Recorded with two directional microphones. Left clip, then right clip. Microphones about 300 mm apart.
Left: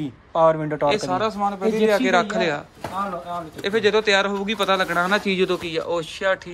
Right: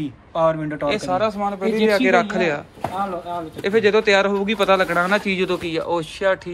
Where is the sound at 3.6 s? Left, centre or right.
Centre.